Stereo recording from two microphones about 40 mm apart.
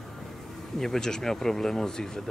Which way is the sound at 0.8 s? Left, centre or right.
Centre.